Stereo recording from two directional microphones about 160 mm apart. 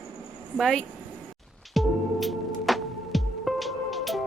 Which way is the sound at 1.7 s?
Centre (ahead or behind).